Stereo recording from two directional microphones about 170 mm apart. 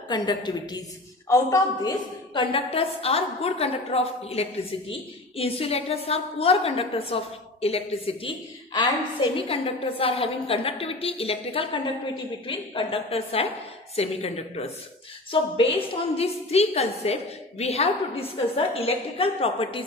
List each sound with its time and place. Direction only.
0.1 s a woman's voice: 25° left (ahead or behind)